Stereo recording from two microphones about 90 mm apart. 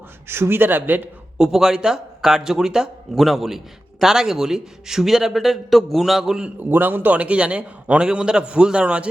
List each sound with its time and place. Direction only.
0.3 s a man's voice: 25° right (ahead or behind)
1.4 s a man's voice: 5° right (ahead or behind)
6.6 s a man's voice: 20° right (ahead or behind)